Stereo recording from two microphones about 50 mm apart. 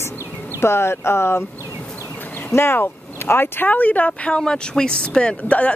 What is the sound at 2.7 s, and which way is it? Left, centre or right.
Speech, left.